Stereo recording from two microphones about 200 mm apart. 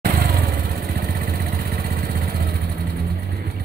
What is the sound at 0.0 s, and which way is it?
Vehicle, 50° right (ahead or behind).